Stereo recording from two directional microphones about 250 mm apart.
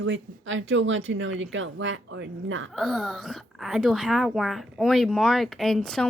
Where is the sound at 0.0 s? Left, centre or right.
Right.